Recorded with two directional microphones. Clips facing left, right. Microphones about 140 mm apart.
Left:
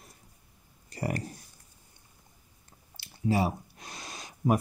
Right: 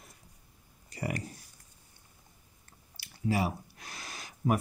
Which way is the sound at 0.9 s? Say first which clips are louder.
Left 3 dB; 40° left (ahead or behind).